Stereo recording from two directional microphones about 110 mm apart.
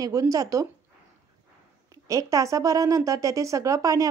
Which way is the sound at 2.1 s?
30° right (ahead or behind).